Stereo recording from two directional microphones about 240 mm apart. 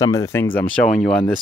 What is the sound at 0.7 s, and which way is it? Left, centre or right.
Speech, centre.